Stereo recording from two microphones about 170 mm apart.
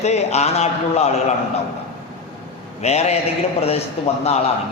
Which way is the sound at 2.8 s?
40° left (ahead or behind).